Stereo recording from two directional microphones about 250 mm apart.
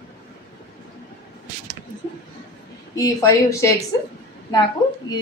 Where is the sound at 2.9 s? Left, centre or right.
Centre.